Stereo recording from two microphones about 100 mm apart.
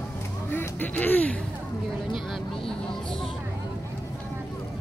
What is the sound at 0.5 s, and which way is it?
Speech, 20° left (ahead or behind).